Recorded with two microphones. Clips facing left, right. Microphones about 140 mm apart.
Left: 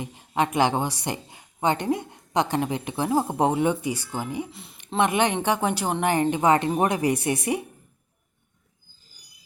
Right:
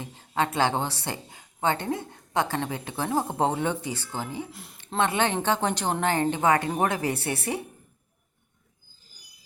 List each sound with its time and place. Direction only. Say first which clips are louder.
0.0 s a woman's voice: left 2 dB; 15° left (ahead or behind)
4.5 s speech: left 1 dB; centre (ahead or behind)
4.9 s a woman's voice: left 3 dB; 15° left (ahead or behind)